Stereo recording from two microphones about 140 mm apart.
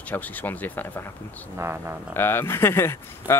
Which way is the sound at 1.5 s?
15° right (ahead or behind).